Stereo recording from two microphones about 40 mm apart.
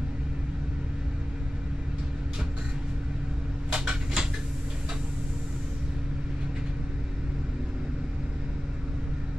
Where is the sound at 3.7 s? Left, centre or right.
Right.